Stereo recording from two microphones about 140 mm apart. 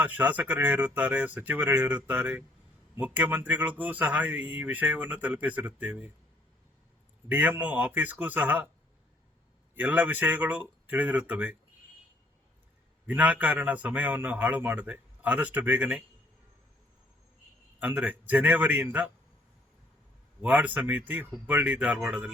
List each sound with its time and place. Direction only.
0.1 s a man's voice: 15° right (ahead or behind)
7.3 s a man's voice: 15° right (ahead or behind)
9.7 s a man's voice: 10° right (ahead or behind)
13.1 s a man's voice: 10° right (ahead or behind)
17.7 s a man's voice: 10° right (ahead or behind)
20.4 s a man's voice: 10° right (ahead or behind)